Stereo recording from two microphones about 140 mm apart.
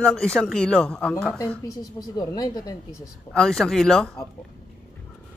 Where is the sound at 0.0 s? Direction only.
5° left (ahead or behind).